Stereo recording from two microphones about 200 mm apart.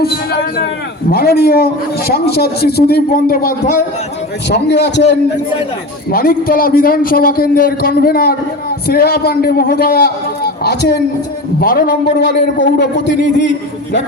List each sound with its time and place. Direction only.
0.0 s a man's voice: 50° left (ahead or behind)
4.4 s a man's voice: 55° left (ahead or behind)
6.1 s a man's voice: 45° left (ahead or behind)